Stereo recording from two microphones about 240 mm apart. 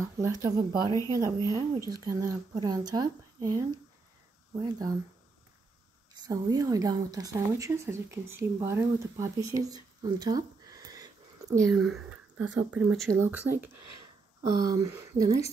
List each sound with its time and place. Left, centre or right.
0.0 s speech: centre
6.1 s speech: centre
11.7 s speech: centre